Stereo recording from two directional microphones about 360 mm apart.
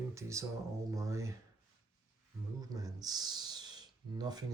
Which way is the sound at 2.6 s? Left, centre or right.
Centre.